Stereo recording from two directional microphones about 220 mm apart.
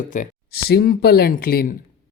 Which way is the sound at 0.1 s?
35° left (ahead or behind).